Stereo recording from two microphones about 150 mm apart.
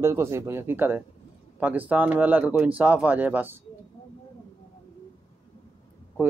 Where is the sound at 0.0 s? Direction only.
20° right (ahead or behind).